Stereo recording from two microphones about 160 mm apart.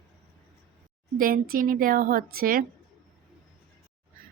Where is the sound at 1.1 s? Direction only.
65° right (ahead or behind).